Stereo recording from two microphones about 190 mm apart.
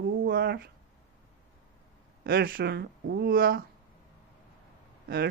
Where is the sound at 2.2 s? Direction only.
50° right (ahead or behind).